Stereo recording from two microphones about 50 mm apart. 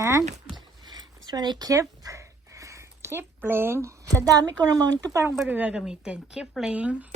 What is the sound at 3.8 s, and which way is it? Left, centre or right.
Speech, right.